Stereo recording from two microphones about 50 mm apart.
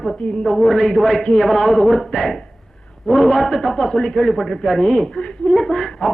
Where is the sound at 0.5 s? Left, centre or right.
Centre.